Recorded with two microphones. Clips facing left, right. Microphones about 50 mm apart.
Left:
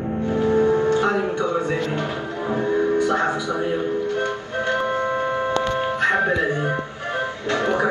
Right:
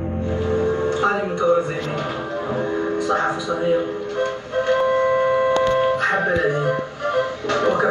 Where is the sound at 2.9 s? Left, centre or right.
Right.